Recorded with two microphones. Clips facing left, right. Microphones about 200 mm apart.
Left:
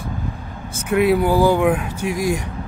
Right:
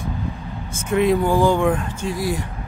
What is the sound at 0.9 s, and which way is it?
Speech, 10° left (ahead or behind).